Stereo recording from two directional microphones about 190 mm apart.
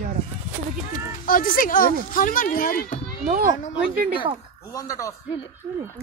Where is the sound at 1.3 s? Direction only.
45° left (ahead or behind).